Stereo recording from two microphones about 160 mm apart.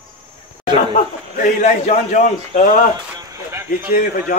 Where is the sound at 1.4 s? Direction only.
50° left (ahead or behind).